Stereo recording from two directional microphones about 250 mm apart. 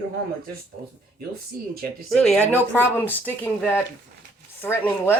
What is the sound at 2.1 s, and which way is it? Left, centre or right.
A woman's voice, centre.